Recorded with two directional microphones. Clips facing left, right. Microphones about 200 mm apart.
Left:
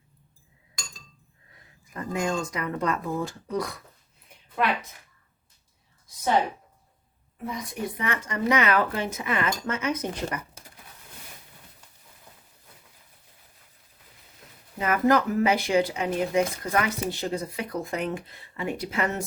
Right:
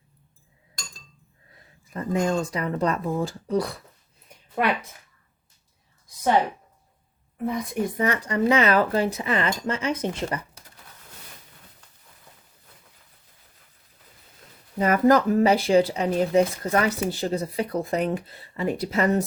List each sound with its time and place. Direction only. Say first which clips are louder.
1.9 s speech: right 4 dB; 30° right (ahead or behind)
7.4 s a woman's voice: right 6 dB; 50° right (ahead or behind); by 10.4 s 30° right (ahead or behind)
14.8 s speech: right 4 dB; 40° right (ahead or behind)